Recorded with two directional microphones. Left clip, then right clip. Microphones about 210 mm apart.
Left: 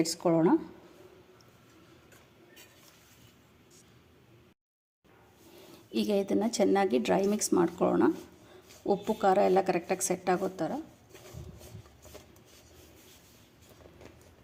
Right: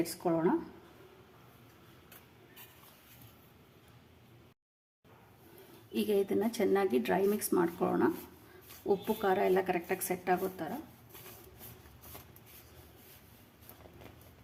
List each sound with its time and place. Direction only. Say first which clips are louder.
0.0 s a woman's voice: left 5 dB; 30° left (ahead or behind)
5.9 s a woman's voice: left 2 dB; 30° left (ahead or behind)